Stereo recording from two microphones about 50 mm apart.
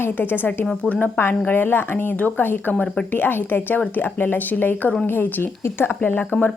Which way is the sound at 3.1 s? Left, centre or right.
Left.